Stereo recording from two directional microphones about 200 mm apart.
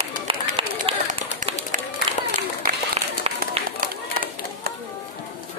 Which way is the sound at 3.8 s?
45° right (ahead or behind).